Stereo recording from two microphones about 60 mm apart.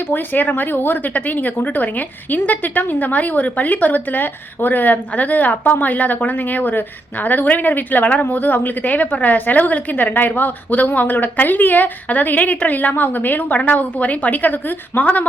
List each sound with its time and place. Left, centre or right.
0.1 s speech: left